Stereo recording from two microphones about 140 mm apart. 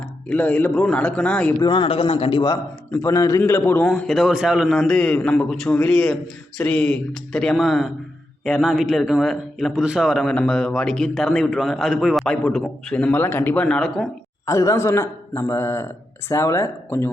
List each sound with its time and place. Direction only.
0.3 s a man's voice: 10° left (ahead or behind)
1.5 s a man's voice: 30° left (ahead or behind)
2.9 s a man's voice: 20° left (ahead or behind)
3.8 s a man's voice: 5° left (ahead or behind)
14.4 s a man's voice: 20° left (ahead or behind)